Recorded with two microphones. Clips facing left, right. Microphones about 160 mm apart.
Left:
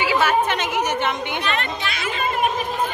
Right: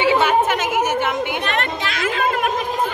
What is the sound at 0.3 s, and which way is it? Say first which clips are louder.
Chatter: right 3 dB; 5° right (ahead or behind).